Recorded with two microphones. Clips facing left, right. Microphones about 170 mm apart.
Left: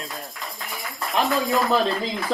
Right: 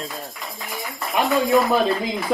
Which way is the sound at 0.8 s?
Centre (ahead or behind).